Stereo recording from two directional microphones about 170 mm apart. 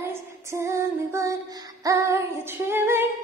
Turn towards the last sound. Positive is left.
turn(degrees=-15)  # may be behind; listen again after turning